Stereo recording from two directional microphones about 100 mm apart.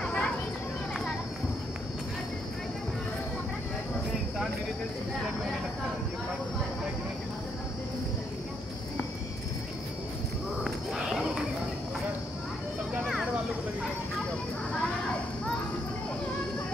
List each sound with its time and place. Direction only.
0.0 s children playing: 10° left (ahead or behind)
10.6 s a sound: 5° right (ahead or behind)
13.0 s vehicle: 5° right (ahead or behind)